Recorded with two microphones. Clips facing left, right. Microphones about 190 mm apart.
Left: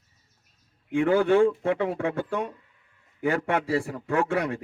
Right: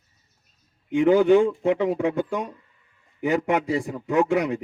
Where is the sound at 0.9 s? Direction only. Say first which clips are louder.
Right 4 dB; 15° right (ahead or behind).